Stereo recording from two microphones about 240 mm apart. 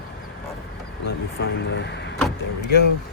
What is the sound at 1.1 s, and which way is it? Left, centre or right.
Speech, left.